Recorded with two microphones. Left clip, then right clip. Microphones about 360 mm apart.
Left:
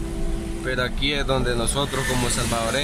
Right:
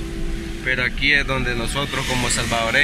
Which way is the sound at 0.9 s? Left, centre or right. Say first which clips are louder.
Right 5 dB; centre.